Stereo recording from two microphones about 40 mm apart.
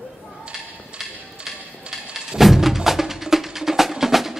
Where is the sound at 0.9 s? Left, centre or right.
Right.